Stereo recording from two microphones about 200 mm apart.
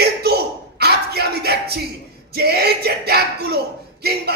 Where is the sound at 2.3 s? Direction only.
50° right (ahead or behind).